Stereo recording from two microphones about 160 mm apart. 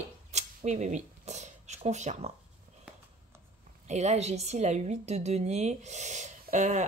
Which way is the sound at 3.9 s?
45° right (ahead or behind).